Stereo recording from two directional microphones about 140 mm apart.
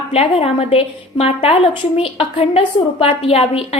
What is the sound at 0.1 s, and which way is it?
A woman's voice, 45° left (ahead or behind).